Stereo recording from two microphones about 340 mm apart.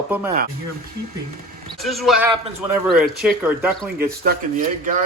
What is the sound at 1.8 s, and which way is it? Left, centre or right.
Speech, centre.